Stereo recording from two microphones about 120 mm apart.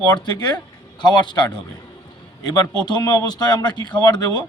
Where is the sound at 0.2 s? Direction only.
40° left (ahead or behind).